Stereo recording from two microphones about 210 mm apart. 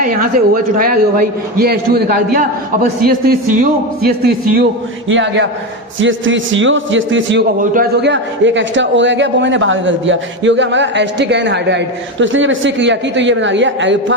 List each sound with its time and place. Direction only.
0.0 s a man's voice: 45° right (ahead or behind)
5.0 s a man's voice: 60° right (ahead or behind)
7.6 s a man's voice: 40° right (ahead or behind)
8.0 s a man's voice: 60° right (ahead or behind)